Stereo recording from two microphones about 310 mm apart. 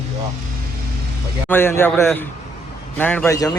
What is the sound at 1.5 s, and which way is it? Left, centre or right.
A man's voice, centre.